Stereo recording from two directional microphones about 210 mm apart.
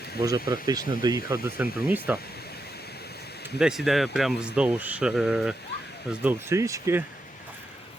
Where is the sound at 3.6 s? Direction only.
Centre (ahead or behind).